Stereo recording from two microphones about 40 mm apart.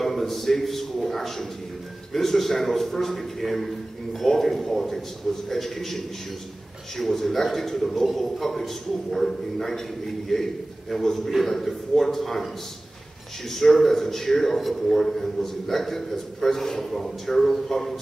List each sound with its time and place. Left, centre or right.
0.0 s a man's voice: centre
13.5 s a man's voice: centre